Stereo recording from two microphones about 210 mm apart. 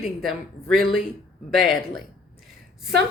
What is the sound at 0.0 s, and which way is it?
Speech, centre (ahead or behind).